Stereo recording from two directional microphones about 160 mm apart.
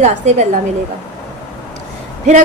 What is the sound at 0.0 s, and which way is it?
Speech, 45° right (ahead or behind).